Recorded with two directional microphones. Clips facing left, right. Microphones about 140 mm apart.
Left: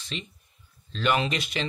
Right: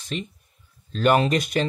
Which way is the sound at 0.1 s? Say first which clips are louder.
Right 6 dB; 45° right (ahead or behind).